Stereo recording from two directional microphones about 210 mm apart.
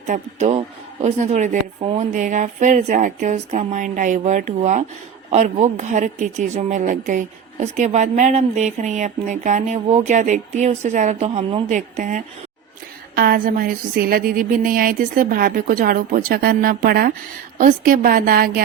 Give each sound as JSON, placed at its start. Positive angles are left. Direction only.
{"t": 0.1, "sound": "speech", "side_deg": -35}
{"t": 13.1, "sound": "a sound", "side_deg": -45}
{"t": 17.6, "sound": "speech", "side_deg": -40}